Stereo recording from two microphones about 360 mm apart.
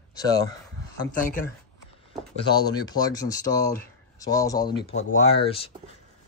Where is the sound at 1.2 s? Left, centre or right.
Left.